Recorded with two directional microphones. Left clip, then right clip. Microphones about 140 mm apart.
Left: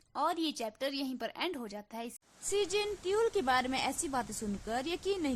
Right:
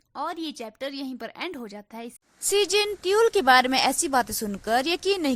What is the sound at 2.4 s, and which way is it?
Speech, 60° right (ahead or behind).